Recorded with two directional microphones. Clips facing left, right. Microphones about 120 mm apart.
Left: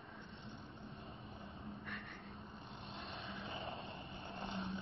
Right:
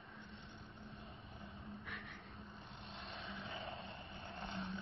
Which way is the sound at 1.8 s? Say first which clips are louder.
Left 2 dB; 5° right (ahead or behind).